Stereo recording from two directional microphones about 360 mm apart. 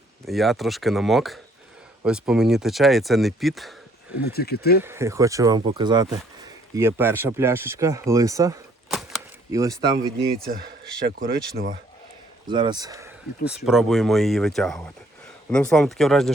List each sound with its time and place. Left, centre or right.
0.3 s speech: centre
4.2 s speech: left
4.8 s speech: centre
10.4 s speech: right
12.5 s speech: centre